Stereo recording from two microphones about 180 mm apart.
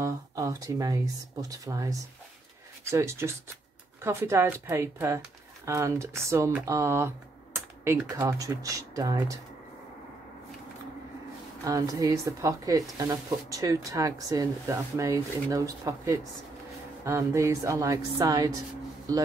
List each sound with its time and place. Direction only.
0.0 s a woman's voice: 20° right (ahead or behind)
11.6 s a woman's voice: 20° right (ahead or behind)